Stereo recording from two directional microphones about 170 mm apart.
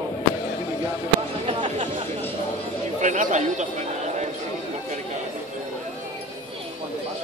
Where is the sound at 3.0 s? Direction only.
45° right (ahead or behind).